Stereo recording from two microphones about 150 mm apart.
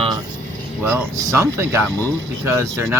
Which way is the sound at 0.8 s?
15° right (ahead or behind).